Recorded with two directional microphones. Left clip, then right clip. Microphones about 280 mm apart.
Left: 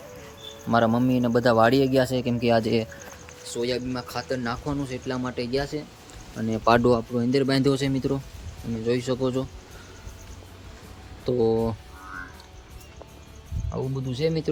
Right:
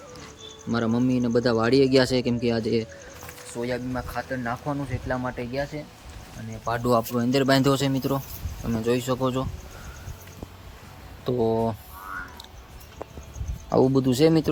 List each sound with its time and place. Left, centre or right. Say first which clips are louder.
0.7 s speech: left 4 dB; centre
6.4 s speech: left 12 dB; left
6.8 s speech: even; centre
11.3 s speech: left 1 dB; centre
13.7 s speech: right 12 dB; right
14.1 s speech: right 6 dB; centre